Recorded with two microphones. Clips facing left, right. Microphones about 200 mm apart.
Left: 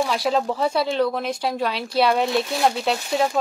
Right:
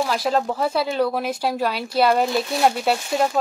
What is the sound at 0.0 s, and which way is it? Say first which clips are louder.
Speech: even; centre (ahead or behind).